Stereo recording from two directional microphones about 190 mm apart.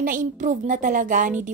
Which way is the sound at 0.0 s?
45° right (ahead or behind).